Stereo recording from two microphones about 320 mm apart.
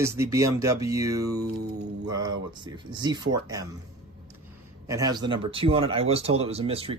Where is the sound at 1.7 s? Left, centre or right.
Right.